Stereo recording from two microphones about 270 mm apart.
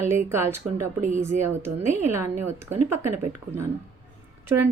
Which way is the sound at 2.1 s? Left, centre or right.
Centre.